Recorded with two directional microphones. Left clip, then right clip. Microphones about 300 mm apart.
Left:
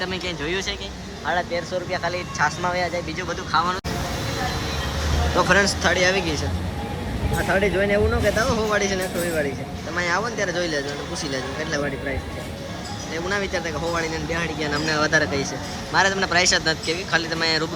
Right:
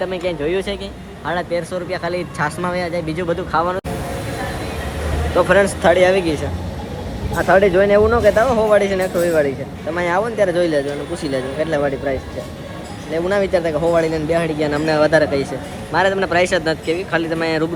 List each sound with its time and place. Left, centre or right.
0.0 s speech: centre
1.3 s speech: right
3.2 s speech: centre
5.4 s speech: centre
7.3 s speech: centre
13.1 s speech: centre